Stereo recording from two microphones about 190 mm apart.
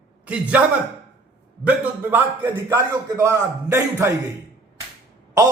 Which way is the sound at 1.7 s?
10° right (ahead or behind).